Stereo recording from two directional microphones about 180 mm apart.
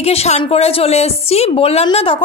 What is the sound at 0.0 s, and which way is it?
Speech, 35° left (ahead or behind).